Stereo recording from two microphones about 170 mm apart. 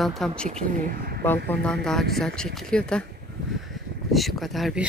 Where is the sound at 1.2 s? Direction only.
10° left (ahead or behind).